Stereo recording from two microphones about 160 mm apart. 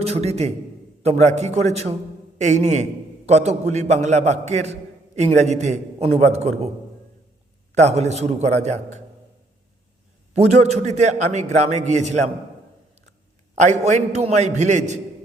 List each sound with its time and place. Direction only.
0.0 s a man's voice: 40° right (ahead or behind)
7.8 s a man's voice: 45° right (ahead or behind)
10.3 s a man's voice: 45° right (ahead or behind)
13.6 s a man's voice: 45° right (ahead or behind)